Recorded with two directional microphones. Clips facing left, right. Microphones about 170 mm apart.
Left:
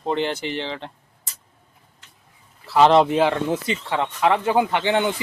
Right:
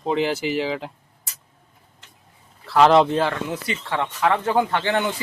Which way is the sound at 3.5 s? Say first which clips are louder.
Left 3 dB; 20° left (ahead or behind).